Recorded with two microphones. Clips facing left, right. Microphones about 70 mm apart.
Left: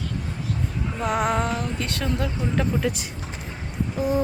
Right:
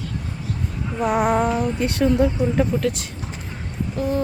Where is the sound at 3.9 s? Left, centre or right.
Centre.